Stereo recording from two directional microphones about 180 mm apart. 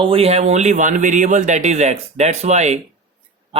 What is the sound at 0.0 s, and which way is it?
Speech, 35° right (ahead or behind).